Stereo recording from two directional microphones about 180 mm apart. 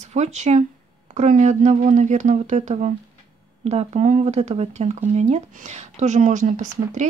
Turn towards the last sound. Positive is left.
turn(degrees=-45)  # may be behind; listen again after turning